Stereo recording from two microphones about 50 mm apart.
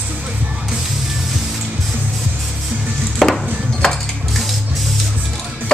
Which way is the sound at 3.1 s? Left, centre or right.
Centre.